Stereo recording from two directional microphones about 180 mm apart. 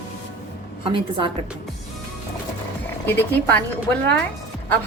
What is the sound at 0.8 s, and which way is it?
Speech, 30° right (ahead or behind).